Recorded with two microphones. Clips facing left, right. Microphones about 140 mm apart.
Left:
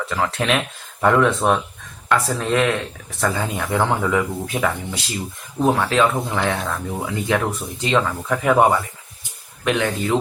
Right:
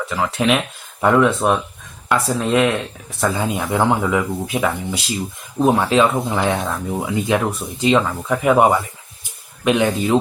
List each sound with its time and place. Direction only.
0.1 s speech: 10° right (ahead or behind)
9.6 s speech: 20° right (ahead or behind)